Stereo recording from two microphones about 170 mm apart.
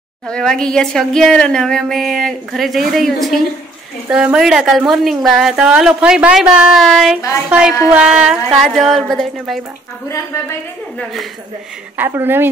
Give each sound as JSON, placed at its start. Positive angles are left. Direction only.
{"t": 0.3, "sound": "speech", "side_deg": 5}
{"t": 10.0, "sound": "a woman's voice", "side_deg": 15}
{"t": 12.0, "sound": "speech", "side_deg": -10}